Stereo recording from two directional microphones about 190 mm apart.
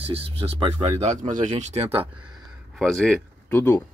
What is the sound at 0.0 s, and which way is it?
Speech, 30° right (ahead or behind).